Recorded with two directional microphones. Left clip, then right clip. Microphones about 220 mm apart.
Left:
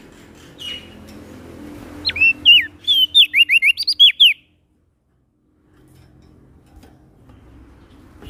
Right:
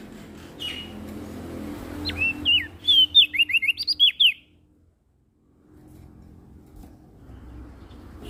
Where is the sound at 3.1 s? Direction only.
30° left (ahead or behind).